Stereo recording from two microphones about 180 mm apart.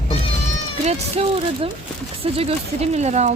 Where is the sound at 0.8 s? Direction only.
35° right (ahead or behind).